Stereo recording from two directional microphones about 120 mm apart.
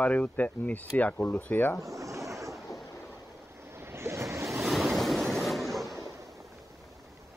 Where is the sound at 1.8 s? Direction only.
25° right (ahead or behind).